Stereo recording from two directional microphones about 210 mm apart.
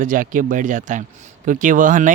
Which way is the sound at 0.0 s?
40° right (ahead or behind).